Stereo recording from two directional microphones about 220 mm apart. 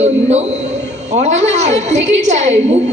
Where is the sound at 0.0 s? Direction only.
30° right (ahead or behind).